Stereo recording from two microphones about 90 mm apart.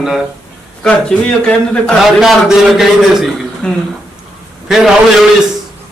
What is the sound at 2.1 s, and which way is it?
A man's voice, 5° right (ahead or behind).